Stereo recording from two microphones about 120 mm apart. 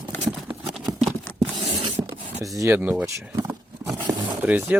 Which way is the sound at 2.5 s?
20° right (ahead or behind).